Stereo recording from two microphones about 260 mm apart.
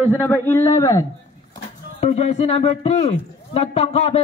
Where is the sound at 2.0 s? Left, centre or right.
Left.